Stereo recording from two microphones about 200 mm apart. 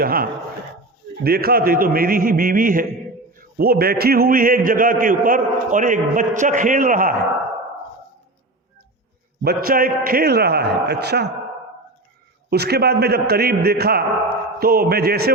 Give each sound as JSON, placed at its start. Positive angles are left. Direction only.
{"t": 0.0, "sound": "a man's voice", "side_deg": -45}
{"t": 9.4, "sound": "a man's voice", "side_deg": -50}
{"t": 12.5, "sound": "a man's voice", "side_deg": -50}